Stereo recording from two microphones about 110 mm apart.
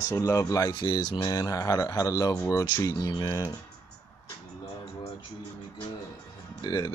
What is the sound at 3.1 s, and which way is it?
Speech, 40° left (ahead or behind).